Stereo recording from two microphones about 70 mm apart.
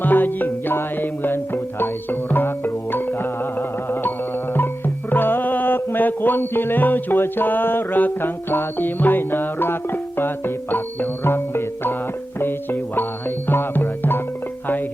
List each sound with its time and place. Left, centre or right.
0.0 s music: left
5.1 s music: left